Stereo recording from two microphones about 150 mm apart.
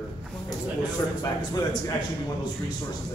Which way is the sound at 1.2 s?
30° left (ahead or behind).